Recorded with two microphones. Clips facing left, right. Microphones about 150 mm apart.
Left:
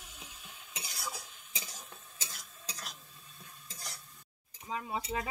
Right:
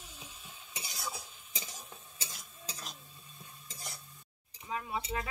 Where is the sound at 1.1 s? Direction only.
5° right (ahead or behind).